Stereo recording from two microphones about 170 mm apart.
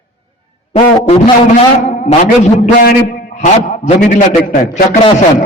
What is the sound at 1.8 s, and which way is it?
Speech, 45° left (ahead or behind).